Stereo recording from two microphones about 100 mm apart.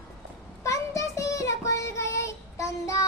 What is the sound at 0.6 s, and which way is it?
Child singing, 30° left (ahead or behind).